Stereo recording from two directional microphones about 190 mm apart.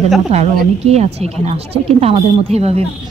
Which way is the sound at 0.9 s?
35° right (ahead or behind).